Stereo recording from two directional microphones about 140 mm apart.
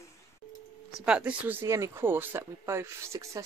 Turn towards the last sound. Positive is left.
turn(degrees=-20)  # may be behind; listen again after turning